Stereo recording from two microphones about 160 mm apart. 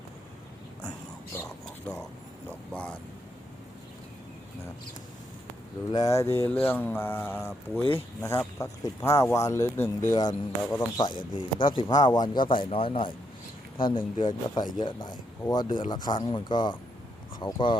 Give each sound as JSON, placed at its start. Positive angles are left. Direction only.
{"t": 1.4, "sound": "whispering", "side_deg": 20}
{"t": 5.9, "sound": "speech", "side_deg": 20}